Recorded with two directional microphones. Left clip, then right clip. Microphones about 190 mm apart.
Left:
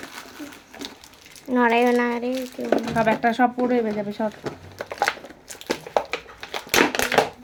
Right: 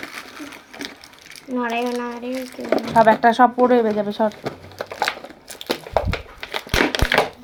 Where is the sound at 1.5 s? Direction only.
50° left (ahead or behind).